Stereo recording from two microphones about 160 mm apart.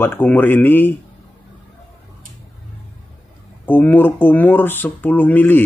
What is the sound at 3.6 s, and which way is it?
Speech, 10° left (ahead or behind).